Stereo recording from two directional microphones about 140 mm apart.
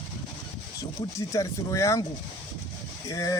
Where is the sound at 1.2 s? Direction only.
20° left (ahead or behind).